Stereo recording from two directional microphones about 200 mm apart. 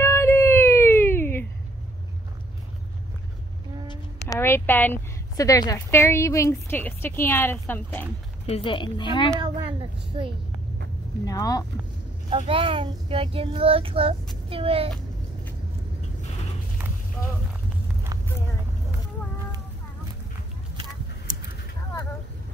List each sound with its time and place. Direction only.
0.0 s a sound: 10° left (ahead or behind)
3.8 s a sound: 20° left (ahead or behind)
4.4 s a woman's voice: 10° left (ahead or behind)
8.5 s a woman's voice: 25° left (ahead or behind)
9.3 s child singing: 25° right (ahead or behind)
11.2 s a woman's voice: 20° left (ahead or behind)
12.3 s child singing: 25° right (ahead or behind)